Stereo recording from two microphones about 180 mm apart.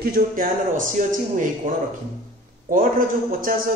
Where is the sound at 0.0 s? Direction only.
55° right (ahead or behind).